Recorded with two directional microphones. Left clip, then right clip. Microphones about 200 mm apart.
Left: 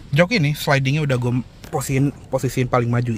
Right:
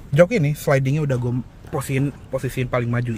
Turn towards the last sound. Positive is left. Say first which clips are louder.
# left 3 dB
turn(degrees=25)  # may be behind; listen again after turning